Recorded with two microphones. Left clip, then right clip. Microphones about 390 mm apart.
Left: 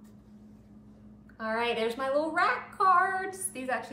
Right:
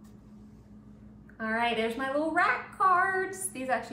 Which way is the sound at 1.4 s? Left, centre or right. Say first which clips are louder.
Right 1 dB; centre.